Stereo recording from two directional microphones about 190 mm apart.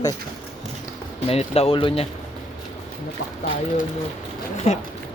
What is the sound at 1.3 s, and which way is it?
Speech, 30° left (ahead or behind).